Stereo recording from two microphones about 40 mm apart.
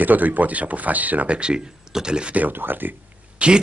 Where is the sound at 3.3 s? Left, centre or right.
Right.